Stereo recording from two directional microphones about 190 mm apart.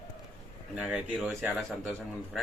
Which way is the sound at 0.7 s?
5° right (ahead or behind).